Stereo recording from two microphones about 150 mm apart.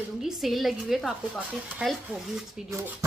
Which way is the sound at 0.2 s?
Centre (ahead or behind).